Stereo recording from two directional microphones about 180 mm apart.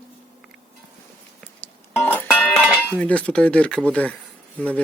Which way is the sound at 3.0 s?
5° left (ahead or behind).